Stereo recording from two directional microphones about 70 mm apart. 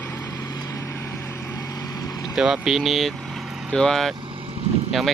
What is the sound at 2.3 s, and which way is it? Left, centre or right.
Speech, centre.